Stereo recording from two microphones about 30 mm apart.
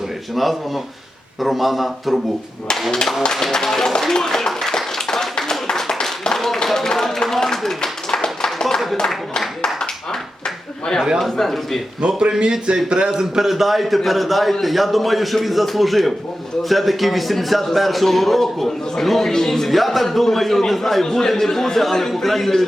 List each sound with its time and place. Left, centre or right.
0.3 s speech: centre
3.5 s a man's voice: centre
4.1 s clapping: centre
5.7 s a sound: centre
6.7 s a man's voice: centre
7.8 s a sound: left
9.8 s a sound: left
11.2 s speech: centre
12.0 s speech: right
13.1 s a man's voice: centre
13.5 s a man's voice: centre